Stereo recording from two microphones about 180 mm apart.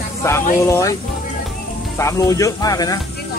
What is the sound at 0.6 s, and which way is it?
Speech, 15° left (ahead or behind).